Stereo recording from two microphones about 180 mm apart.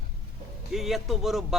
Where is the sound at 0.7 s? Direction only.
Centre (ahead or behind).